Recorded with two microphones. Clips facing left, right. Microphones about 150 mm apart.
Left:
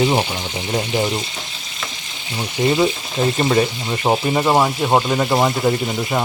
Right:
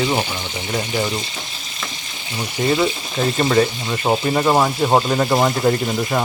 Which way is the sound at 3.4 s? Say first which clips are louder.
Right 3 dB; 20° left (ahead or behind).